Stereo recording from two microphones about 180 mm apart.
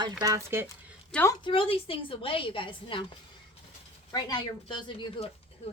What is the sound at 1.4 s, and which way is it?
Speech, 30° left (ahead or behind).